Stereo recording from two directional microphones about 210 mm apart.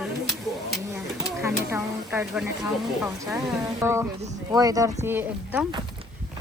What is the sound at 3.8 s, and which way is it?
Speech, 10° right (ahead or behind).